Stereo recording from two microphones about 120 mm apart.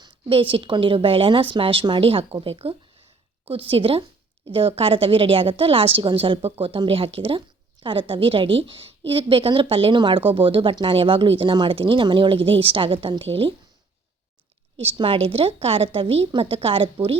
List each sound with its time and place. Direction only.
0.3 s a woman's voice: 50° right (ahead or behind)
14.8 s a woman's voice: 50° right (ahead or behind)